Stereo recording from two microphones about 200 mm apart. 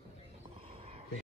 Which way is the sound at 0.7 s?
30° right (ahead or behind).